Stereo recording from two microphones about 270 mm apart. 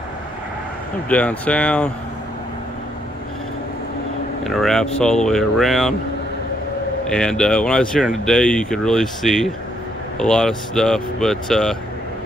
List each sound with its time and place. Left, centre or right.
1.0 s speech: centre
4.5 s speech: centre
7.1 s speech: centre